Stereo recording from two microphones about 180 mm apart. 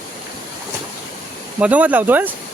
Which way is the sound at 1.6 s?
10° right (ahead or behind).